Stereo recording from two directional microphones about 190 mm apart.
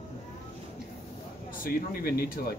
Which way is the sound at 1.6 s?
50° left (ahead or behind).